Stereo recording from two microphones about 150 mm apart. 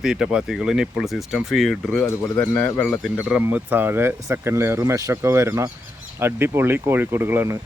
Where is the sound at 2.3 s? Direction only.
15° left (ahead or behind).